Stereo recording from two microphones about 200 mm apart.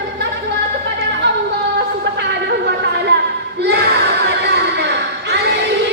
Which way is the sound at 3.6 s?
55° right (ahead or behind).